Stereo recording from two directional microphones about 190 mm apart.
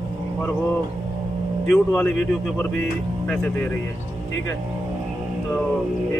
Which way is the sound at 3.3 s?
10° left (ahead or behind).